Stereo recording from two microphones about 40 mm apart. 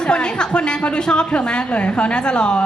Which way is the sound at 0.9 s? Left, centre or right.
Left.